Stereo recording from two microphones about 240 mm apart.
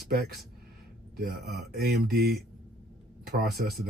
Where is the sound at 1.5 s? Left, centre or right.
Right.